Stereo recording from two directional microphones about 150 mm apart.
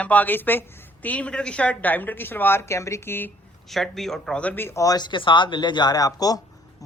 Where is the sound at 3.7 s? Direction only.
Centre (ahead or behind).